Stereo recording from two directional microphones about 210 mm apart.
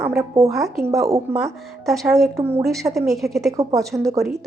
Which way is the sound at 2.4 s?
10° right (ahead or behind).